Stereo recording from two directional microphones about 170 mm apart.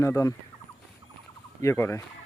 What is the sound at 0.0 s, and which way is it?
Speech, 15° left (ahead or behind).